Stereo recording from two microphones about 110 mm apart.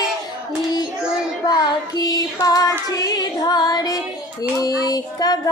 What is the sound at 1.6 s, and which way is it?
Child singing, 35° left (ahead or behind).